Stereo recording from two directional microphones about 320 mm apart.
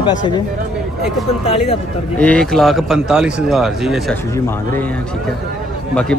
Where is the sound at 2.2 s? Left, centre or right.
Centre.